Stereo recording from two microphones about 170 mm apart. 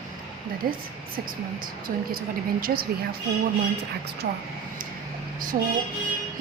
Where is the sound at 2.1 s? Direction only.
60° right (ahead or behind).